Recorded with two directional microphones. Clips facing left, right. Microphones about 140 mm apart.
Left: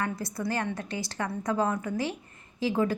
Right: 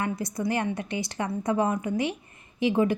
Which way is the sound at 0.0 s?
20° right (ahead or behind).